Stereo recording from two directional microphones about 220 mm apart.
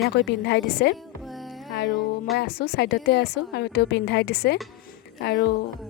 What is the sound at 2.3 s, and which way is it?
A woman's voice, 45° left (ahead or behind).